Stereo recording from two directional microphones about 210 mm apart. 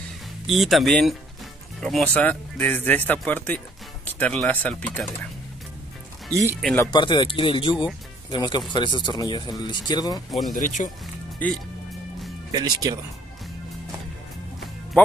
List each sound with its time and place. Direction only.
0.5 s speech: centre (ahead or behind)
6.6 s speech: 10° left (ahead or behind)
6.9 s speech: 20° left (ahead or behind)
10.5 s speech: 35° left (ahead or behind)
11.4 s speech: 10° left (ahead or behind)
12.5 s speech: 20° right (ahead or behind)